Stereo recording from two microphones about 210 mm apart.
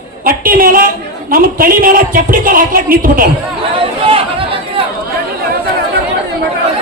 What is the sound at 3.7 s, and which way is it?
Chatter, 25° right (ahead or behind).